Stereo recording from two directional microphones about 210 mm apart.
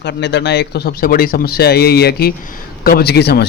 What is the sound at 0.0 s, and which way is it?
A man's voice, 55° left (ahead or behind).